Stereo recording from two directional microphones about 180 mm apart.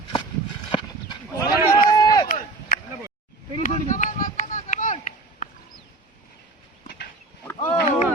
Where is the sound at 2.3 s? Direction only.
50° left (ahead or behind).